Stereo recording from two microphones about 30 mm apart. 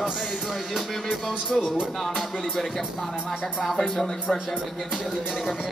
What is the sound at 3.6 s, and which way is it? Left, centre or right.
Speech, centre.